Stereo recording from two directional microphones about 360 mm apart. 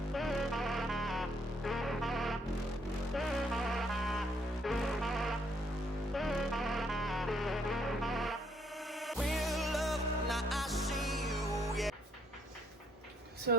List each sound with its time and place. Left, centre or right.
0.1 s music: centre
13.5 s speech: right